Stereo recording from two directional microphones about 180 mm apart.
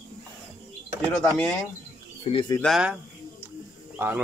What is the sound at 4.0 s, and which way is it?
Speech, 15° right (ahead or behind).